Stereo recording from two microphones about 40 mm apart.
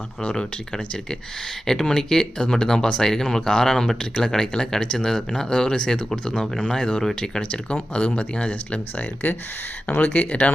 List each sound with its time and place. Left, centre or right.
0.2 s speech: left
1.6 s speech: centre
7.5 s speech: left